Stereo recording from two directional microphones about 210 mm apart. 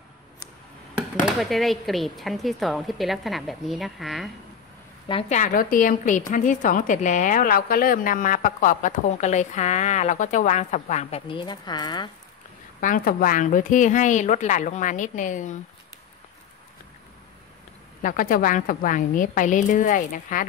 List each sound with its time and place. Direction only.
0.9 s speech: centre (ahead or behind)
5.0 s a woman's voice: 25° left (ahead or behind)
5.4 s a woman's voice: 40° left (ahead or behind); by 12.1 s 20° left (ahead or behind)
12.8 s a woman's voice: 40° left (ahead or behind)
18.0 s a woman's voice: 40° left (ahead or behind)